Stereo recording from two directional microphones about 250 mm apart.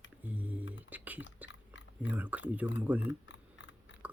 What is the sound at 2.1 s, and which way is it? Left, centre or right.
Speech, centre.